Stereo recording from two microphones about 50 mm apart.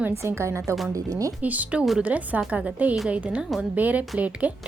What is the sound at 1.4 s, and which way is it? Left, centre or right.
A woman's voice, right.